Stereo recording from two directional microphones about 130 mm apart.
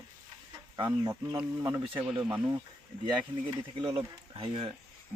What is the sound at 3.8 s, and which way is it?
Speech, 40° right (ahead or behind).